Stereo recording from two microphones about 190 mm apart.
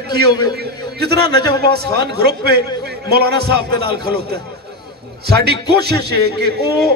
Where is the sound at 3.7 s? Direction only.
25° left (ahead or behind).